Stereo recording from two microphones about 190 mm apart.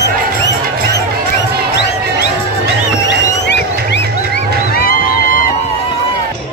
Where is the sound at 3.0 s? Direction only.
65° left (ahead or behind).